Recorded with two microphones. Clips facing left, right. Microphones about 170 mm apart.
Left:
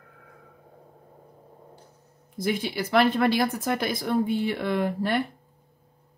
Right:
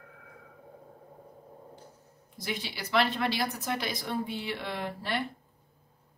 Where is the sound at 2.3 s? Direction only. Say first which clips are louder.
Left 10 dB; 50° left (ahead or behind).